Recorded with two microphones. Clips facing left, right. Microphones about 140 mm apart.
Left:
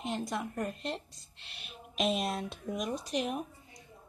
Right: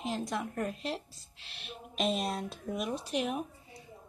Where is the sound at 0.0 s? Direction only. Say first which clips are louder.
Right 1 dB; centre (ahead or behind).